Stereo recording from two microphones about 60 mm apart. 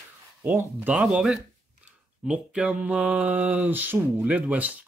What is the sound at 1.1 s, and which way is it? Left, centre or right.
Speech, centre.